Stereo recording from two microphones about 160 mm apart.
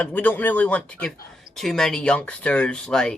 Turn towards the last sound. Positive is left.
turn(degrees=5)  # may be behind; listen again after turning